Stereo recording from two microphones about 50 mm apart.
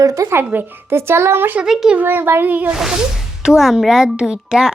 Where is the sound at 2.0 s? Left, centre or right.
Right.